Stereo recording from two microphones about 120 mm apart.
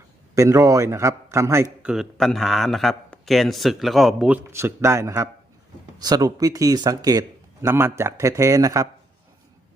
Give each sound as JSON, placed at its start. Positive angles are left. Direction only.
{"t": 0.3, "sound": "a man's voice", "side_deg": -25}
{"t": 1.8, "sound": "a man's voice", "side_deg": -5}
{"t": 4.5, "sound": "a man's voice", "side_deg": -20}
{"t": 7.7, "sound": "a man's voice", "side_deg": -20}